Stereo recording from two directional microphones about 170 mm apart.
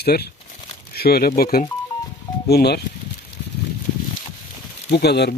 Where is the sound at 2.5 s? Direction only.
70° left (ahead or behind).